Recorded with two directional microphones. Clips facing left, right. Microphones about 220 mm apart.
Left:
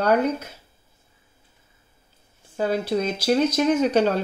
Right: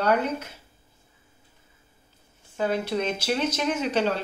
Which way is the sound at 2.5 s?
35° left (ahead or behind).